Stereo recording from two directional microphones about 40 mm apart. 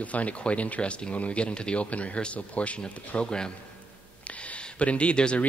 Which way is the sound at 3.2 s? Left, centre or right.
Centre.